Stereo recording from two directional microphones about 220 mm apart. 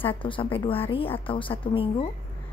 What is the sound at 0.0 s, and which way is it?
Speech, 25° left (ahead or behind).